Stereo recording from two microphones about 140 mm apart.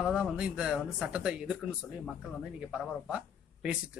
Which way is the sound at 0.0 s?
5° right (ahead or behind).